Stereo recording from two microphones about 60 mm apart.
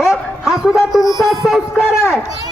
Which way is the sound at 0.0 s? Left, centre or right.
Centre.